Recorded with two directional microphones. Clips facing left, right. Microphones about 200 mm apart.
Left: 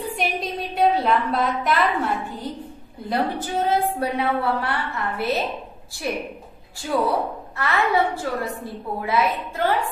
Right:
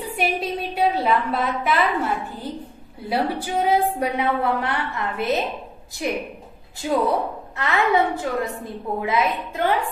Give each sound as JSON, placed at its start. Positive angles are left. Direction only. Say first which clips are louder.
{"t": 0.2, "sound": "a woman's voice", "louder": "right 5 dB", "side_deg": -5}
{"t": 3.1, "sound": "a woman's voice", "louder": "right 1 dB", "side_deg": -10}